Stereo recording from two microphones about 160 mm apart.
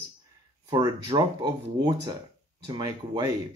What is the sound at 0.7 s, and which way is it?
Speech, 30° right (ahead or behind).